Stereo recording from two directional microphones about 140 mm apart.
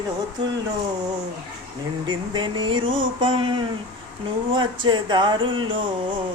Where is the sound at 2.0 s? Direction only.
35° right (ahead or behind).